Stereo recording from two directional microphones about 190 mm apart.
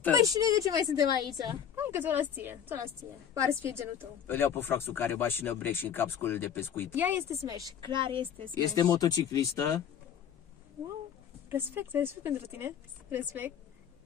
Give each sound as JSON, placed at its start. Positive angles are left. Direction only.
{"t": 0.2, "sound": "a woman's voice", "side_deg": -20}
{"t": 4.3, "sound": "speech", "side_deg": 10}
{"t": 7.0, "sound": "a woman's voice", "side_deg": -10}
{"t": 8.7, "sound": "speech", "side_deg": 20}
{"t": 11.4, "sound": "a woman's voice", "side_deg": -10}